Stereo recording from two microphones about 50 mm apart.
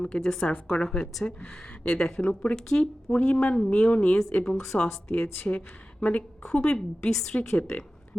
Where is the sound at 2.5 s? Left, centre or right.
Centre.